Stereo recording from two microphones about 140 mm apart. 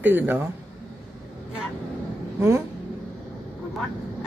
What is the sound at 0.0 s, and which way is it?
Speech, 15° right (ahead or behind).